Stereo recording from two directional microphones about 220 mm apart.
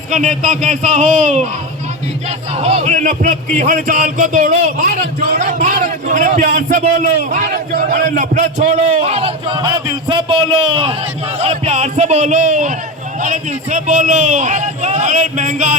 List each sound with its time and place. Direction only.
0.1 s a man's voice: 35° right (ahead or behind)
2.6 s a man's voice: 30° right (ahead or behind)